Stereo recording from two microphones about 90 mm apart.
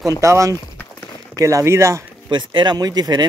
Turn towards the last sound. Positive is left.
turn(degrees=-45)  # may be behind; listen again after turning